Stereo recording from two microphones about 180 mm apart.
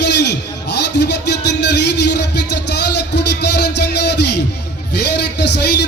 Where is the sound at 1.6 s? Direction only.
70° left (ahead or behind).